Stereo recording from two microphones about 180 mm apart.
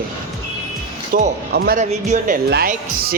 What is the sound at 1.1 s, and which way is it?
Speech, 55° right (ahead or behind).